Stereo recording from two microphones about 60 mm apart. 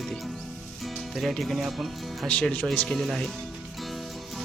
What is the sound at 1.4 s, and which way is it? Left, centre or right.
Speech, centre.